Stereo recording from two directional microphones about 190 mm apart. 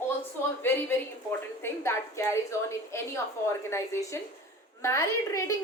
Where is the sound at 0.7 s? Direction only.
10° left (ahead or behind).